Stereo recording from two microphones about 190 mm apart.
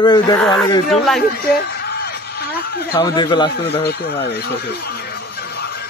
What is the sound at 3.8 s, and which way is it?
Speech, 55° left (ahead or behind).